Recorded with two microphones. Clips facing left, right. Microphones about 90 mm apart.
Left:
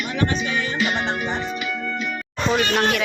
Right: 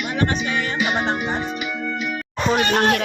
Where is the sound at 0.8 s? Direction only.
20° right (ahead or behind).